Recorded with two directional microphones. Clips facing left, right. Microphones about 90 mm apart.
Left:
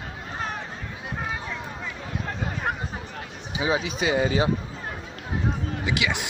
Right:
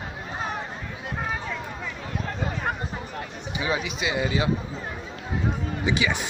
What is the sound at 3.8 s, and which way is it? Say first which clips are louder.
Speech: left 3 dB; 40° left (ahead or behind).